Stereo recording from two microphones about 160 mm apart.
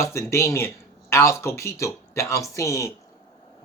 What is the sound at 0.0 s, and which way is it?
A man's voice, 15° left (ahead or behind).